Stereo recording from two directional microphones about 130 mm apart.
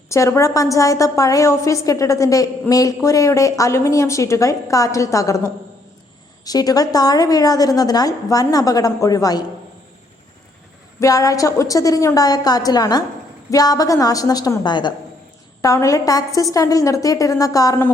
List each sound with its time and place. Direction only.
0.1 s a woman's voice: 25° left (ahead or behind)
11.0 s a woman's voice: 25° left (ahead or behind)